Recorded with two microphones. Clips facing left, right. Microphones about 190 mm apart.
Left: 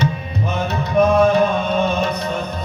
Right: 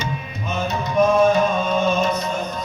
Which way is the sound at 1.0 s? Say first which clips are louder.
Left 2 dB; 60° left (ahead or behind).